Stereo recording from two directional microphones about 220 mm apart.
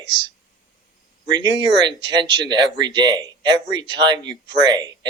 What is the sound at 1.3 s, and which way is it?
Speech, 20° right (ahead or behind).